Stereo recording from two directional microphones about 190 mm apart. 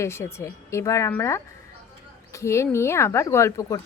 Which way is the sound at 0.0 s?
15° left (ahead or behind).